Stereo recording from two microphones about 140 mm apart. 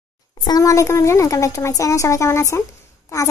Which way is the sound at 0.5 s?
25° left (ahead or behind).